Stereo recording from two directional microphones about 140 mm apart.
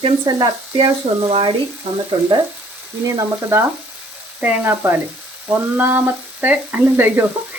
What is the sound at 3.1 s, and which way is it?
Frying, 20° right (ahead or behind).